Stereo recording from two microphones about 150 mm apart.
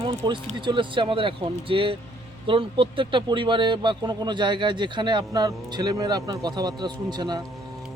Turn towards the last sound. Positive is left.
turn(degrees=-30)  # may be behind; listen again after turning